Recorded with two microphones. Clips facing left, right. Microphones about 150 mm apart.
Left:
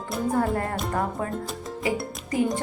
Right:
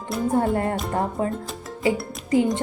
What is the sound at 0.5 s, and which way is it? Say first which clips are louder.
Speech: right 3 dB; 25° right (ahead or behind).